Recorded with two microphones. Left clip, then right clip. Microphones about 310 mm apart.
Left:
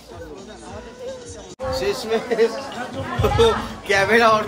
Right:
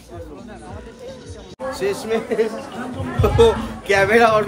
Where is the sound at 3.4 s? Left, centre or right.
Centre.